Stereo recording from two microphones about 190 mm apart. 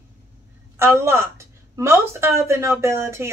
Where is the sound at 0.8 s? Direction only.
15° right (ahead or behind).